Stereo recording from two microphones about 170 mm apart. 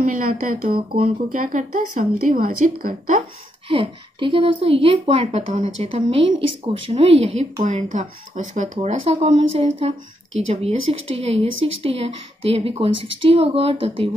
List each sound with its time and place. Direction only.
0.1 s a woman's voice: 55° right (ahead or behind)
3.6 s a woman's voice: 30° right (ahead or behind)
8.5 s a woman's voice: 35° right (ahead or behind)